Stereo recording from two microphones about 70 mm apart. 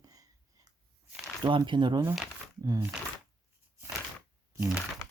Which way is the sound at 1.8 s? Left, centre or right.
Right.